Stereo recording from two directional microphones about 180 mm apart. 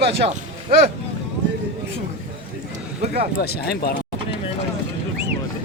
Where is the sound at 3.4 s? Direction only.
60° left (ahead or behind).